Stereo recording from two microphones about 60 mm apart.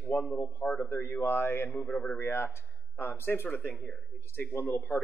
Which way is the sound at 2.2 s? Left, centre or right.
Left.